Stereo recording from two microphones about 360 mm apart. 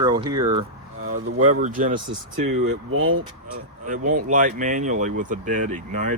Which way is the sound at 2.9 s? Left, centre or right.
Right.